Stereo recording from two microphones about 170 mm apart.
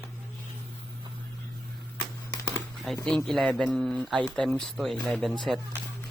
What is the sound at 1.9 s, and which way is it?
Computer keyboard, 25° left (ahead or behind).